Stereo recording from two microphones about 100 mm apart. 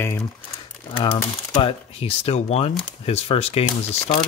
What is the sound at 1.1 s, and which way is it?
Speech, 70° left (ahead or behind).